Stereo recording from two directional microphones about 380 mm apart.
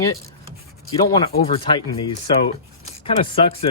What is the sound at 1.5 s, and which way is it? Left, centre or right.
Speech, centre.